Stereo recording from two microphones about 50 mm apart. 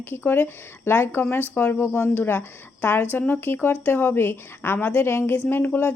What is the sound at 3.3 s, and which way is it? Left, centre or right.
Speech, left.